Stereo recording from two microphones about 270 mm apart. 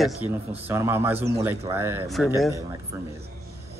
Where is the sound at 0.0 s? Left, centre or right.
Centre.